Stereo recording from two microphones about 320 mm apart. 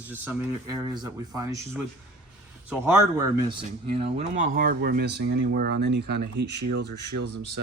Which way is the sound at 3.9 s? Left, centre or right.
Centre.